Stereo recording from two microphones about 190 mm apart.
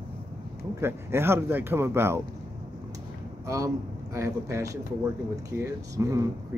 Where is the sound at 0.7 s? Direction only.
15° right (ahead or behind).